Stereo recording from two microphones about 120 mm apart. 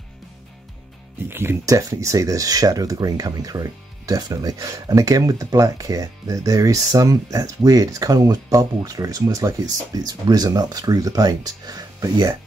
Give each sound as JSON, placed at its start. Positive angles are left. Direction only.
{"t": 1.3, "sound": "speech", "side_deg": -20}